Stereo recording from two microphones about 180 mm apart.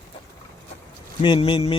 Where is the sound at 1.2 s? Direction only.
30° left (ahead or behind).